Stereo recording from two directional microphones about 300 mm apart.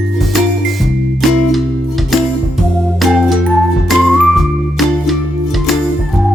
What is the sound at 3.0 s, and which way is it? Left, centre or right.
Music, centre.